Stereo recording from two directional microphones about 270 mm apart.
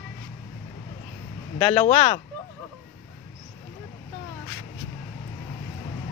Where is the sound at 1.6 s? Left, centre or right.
Centre.